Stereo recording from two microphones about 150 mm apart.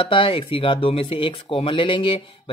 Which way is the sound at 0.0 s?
35° left (ahead or behind).